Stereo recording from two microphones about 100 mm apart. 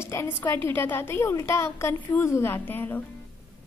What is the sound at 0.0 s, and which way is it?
A woman's voice, 25° left (ahead or behind).